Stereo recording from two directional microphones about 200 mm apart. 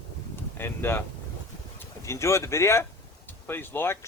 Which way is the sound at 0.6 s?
10° left (ahead or behind).